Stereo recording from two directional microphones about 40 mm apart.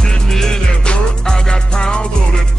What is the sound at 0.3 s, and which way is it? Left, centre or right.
Music, centre.